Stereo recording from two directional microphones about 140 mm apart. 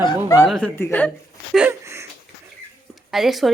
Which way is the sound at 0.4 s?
5° left (ahead or behind).